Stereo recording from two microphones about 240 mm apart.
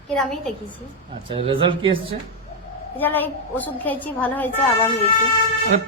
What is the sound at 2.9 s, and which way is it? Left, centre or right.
A woman's voice, centre.